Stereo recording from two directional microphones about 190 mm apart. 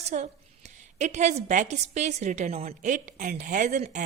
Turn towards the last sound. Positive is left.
turn(degrees=-40)  # may be behind; listen again after turning